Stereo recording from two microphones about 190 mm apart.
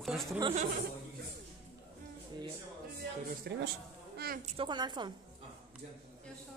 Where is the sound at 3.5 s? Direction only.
60° right (ahead or behind).